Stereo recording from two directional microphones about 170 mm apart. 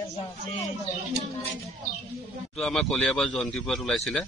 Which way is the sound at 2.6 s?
5° left (ahead or behind).